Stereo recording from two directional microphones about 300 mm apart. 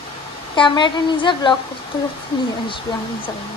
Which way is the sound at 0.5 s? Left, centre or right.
Centre.